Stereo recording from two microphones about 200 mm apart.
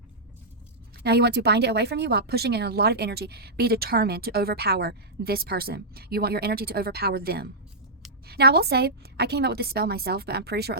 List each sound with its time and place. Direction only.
1.0 s speech: 55° right (ahead or behind)